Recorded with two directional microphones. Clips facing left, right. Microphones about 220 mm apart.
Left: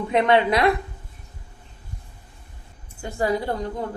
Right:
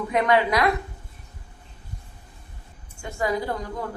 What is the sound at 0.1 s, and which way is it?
Speech, 25° left (ahead or behind).